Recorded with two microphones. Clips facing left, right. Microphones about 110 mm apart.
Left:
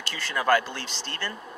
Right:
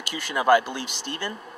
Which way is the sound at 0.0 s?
15° right (ahead or behind).